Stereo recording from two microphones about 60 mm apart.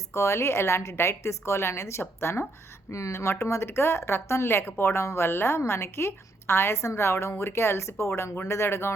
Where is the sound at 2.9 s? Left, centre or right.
Left.